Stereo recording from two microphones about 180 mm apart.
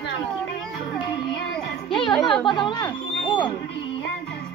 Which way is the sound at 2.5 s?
25° left (ahead or behind).